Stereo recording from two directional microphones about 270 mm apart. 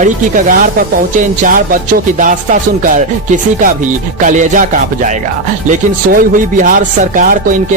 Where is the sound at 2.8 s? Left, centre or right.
Right.